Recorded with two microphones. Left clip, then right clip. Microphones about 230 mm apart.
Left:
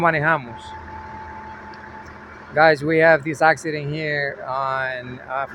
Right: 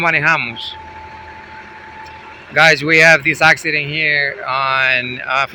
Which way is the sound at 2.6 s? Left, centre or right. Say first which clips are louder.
Right 5 dB; centre.